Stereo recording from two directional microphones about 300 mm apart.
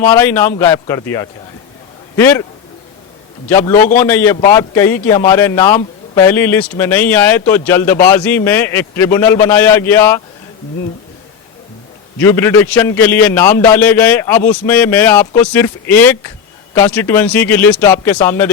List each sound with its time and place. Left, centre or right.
0.1 s a man's voice: centre
3.5 s a man's voice: centre
3.8 s a man's voice: left
4.0 s a man's voice: centre
12.2 s a man's voice: centre